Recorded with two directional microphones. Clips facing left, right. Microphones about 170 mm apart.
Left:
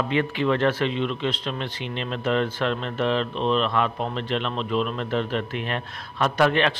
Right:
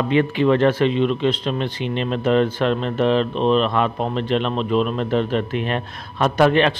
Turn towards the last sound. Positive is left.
turn(degrees=-20)  # may be behind; listen again after turning